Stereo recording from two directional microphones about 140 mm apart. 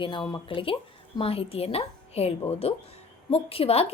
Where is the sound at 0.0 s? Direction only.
35° left (ahead or behind).